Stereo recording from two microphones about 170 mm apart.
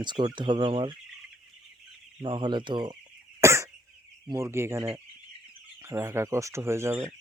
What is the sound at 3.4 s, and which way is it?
Cough, 15° right (ahead or behind).